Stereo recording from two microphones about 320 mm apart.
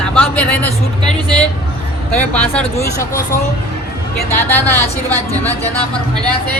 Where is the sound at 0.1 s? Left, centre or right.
Centre.